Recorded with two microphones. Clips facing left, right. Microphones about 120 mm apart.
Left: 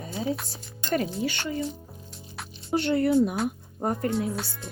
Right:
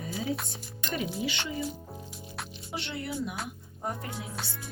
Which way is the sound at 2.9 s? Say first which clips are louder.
Left 14 dB; 55° left (ahead or behind).